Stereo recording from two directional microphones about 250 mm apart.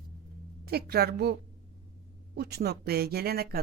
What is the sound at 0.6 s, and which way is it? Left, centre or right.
Speech, right.